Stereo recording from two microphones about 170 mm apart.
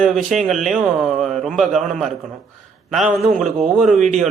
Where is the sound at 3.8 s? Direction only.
Centre (ahead or behind).